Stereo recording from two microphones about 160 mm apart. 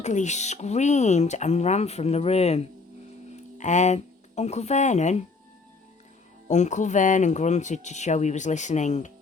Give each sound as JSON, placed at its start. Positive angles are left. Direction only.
{"t": 0.0, "sound": "speech", "side_deg": 50}
{"t": 6.5, "sound": "speech", "side_deg": 50}